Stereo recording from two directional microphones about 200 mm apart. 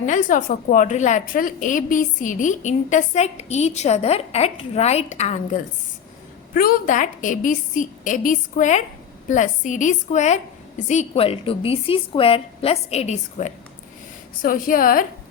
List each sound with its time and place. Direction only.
0.0 s a woman's voice: 40° left (ahead or behind)